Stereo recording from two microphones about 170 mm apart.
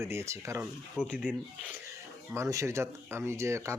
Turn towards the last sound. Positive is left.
turn(degrees=-15)  # may be behind; listen again after turning